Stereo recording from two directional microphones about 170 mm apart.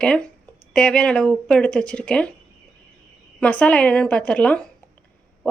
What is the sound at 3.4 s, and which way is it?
Speech, 5° left (ahead or behind).